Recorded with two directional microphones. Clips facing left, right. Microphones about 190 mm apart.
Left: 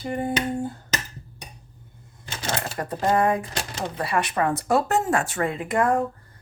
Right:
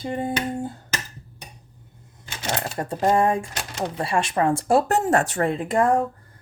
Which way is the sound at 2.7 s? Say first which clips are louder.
Right 2 dB; 25° right (ahead or behind).